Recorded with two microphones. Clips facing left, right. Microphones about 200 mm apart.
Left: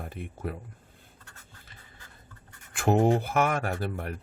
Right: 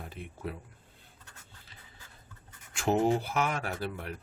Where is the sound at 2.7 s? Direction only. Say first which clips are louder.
Left 4 dB; 55° left (ahead or behind).